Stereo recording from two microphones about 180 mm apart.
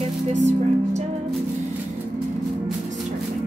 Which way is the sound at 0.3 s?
40° right (ahead or behind).